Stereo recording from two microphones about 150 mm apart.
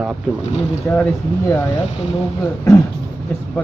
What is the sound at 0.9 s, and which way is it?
Speech, 15° left (ahead or behind).